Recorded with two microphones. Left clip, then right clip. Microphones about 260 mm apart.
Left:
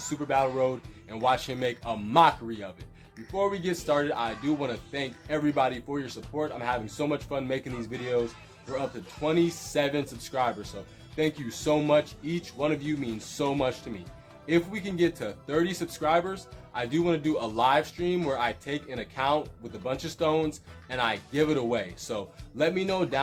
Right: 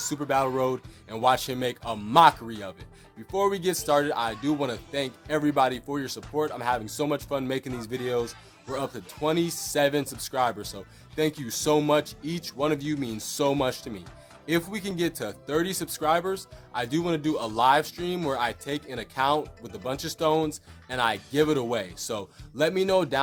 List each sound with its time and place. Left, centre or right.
0.1 s a man's voice: right